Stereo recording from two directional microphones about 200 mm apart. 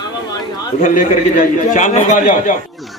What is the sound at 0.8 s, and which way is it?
A man's voice, 40° left (ahead or behind).